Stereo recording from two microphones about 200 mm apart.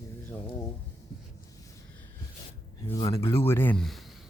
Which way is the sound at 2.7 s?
20° left (ahead or behind).